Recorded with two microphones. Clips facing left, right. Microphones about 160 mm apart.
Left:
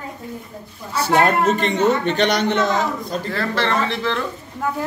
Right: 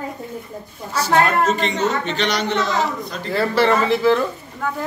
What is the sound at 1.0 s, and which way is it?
A man's voice, 55° left (ahead or behind).